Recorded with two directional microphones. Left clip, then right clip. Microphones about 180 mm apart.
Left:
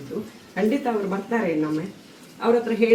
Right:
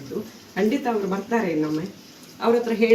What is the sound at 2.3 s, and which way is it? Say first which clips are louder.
Speech: even; 35° right (ahead or behind).